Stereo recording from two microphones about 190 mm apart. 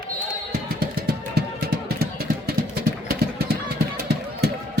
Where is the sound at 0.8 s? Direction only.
50° right (ahead or behind).